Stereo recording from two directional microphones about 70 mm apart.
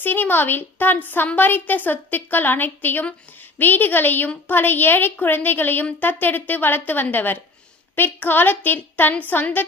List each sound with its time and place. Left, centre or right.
0.0 s a woman's voice: left